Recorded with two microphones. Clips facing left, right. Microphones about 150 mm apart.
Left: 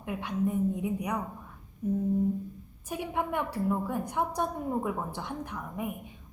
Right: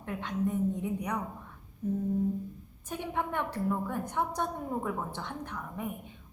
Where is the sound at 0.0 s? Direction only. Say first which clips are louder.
Left 2 dB; 10° left (ahead or behind).